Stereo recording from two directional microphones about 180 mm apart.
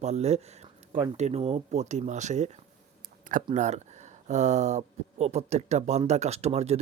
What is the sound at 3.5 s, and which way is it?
Speech, 40° right (ahead or behind).